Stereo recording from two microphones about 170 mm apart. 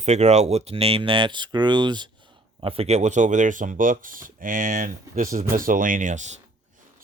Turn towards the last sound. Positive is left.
turn(degrees=-45)  # may be behind; listen again after turning